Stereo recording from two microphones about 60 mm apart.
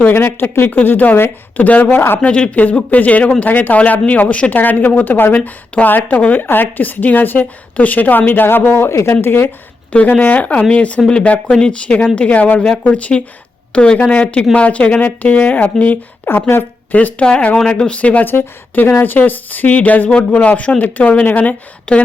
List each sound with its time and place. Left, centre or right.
0.1 s speech: left
2.2 s speech: left
9.9 s speech: left
16.9 s speech: left